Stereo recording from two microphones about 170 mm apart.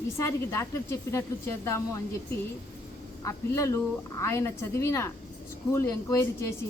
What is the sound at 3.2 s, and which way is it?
A woman's voice, 15° left (ahead or behind).